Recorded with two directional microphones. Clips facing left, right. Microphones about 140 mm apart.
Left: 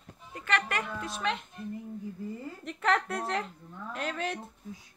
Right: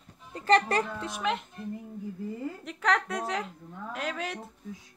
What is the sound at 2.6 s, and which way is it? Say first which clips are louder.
A child's voice: even; centre (ahead or behind).